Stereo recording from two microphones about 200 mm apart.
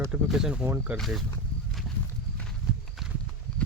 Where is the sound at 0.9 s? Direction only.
Centre (ahead or behind).